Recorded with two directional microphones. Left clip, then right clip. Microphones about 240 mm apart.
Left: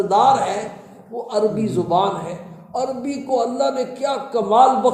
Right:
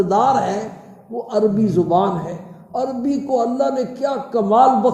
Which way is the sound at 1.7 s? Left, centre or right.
Centre.